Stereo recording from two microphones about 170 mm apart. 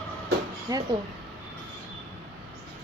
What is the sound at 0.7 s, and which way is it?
Speech, 20° right (ahead or behind).